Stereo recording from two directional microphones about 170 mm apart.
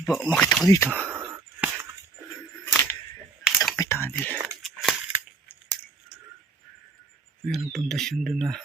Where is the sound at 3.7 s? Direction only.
15° left (ahead or behind).